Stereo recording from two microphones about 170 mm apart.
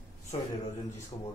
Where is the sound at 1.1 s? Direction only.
30° left (ahead or behind).